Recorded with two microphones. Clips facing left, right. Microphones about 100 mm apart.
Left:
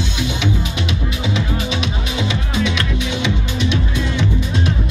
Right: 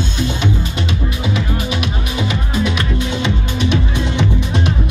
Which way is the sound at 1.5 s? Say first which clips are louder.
Right 1 dB; 10° right (ahead or behind).